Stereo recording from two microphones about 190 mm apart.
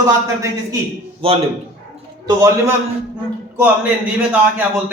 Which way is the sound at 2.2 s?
15° right (ahead or behind).